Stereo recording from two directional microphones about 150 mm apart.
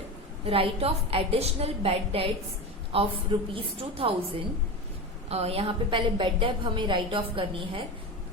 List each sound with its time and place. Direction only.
0.4 s a woman's voice: 40° right (ahead or behind)